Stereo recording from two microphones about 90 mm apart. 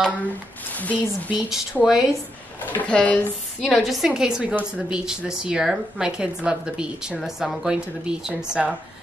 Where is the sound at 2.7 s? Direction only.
15° left (ahead or behind).